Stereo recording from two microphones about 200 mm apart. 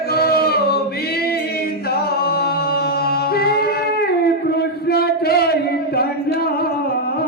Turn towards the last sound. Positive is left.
turn(degrees=50)  # may be behind; listen again after turning